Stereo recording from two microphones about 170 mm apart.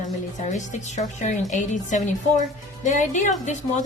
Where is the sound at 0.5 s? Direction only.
45° left (ahead or behind).